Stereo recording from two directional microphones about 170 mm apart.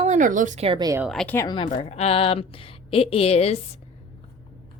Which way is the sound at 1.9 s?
35° left (ahead or behind).